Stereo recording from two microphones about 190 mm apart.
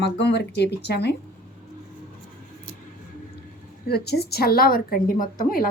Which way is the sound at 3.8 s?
55° left (ahead or behind).